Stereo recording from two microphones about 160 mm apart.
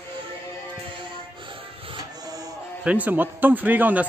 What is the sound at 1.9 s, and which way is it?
Music, 25° right (ahead or behind).